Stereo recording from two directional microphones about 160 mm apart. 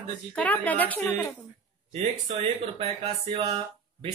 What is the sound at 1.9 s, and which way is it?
Speech, 40° right (ahead or behind).